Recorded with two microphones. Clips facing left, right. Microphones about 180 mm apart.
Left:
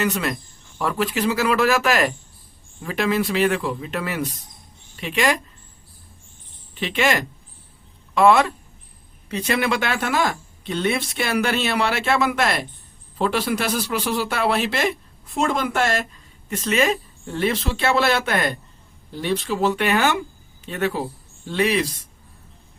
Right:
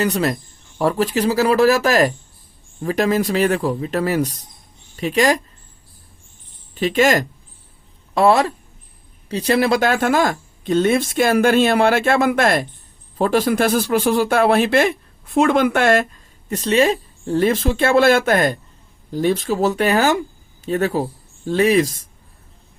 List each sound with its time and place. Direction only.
0.0 s speech: 35° right (ahead or behind)
6.7 s speech: 40° right (ahead or behind)
16.5 s speech: 35° right (ahead or behind)